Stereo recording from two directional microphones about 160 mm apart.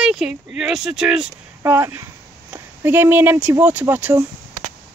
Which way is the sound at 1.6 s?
15° right (ahead or behind).